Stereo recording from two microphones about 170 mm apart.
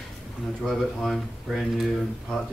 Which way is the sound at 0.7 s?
Centre (ahead or behind).